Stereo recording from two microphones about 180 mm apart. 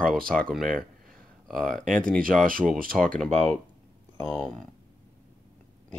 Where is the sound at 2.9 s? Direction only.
5° left (ahead or behind).